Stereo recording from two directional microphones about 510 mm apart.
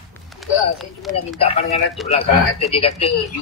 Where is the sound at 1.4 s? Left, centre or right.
Centre.